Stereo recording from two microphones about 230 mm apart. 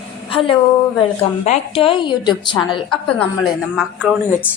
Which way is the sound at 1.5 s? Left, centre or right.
Left.